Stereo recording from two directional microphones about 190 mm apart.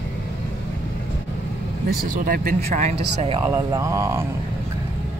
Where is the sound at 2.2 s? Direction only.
50° right (ahead or behind).